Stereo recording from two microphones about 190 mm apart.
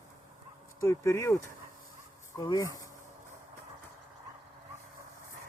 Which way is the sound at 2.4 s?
20° left (ahead or behind).